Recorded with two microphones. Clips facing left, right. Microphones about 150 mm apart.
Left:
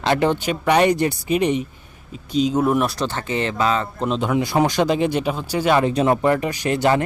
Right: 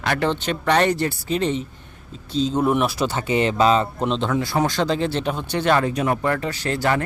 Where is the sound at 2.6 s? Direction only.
Centre (ahead or behind); by 3.8 s 20° right (ahead or behind).